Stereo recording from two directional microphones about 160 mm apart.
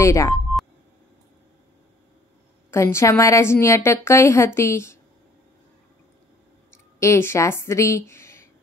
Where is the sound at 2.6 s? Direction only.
15° left (ahead or behind).